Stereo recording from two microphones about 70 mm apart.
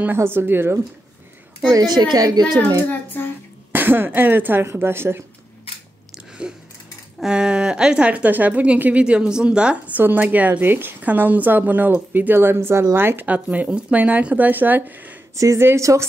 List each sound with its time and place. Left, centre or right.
0.0 s speech: right
1.7 s a woman's voice: right
3.1 s throat clearing: left
3.7 s speech: right
6.1 s chewing: centre
7.2 s a woman's voice: centre
9.9 s a woman's voice: right
15.3 s speech: right